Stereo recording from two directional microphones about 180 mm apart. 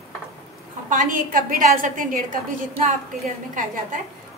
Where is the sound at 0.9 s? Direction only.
45° right (ahead or behind).